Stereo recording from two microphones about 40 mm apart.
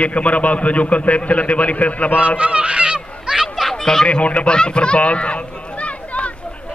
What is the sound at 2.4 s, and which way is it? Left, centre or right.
Speech, right.